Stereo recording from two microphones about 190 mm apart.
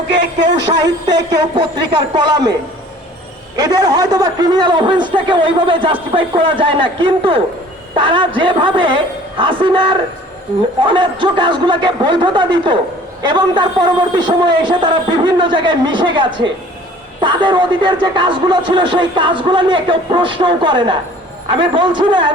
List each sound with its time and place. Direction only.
0.1 s speech: 65° right (ahead or behind)
0.7 s speech: 20° right (ahead or behind)
3.6 s speech: 20° right (ahead or behind)